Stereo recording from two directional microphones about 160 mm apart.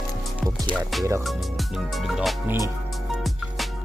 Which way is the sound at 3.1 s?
Centre (ahead or behind).